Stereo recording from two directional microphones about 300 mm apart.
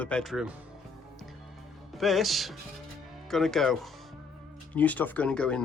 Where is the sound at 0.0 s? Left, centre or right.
Centre.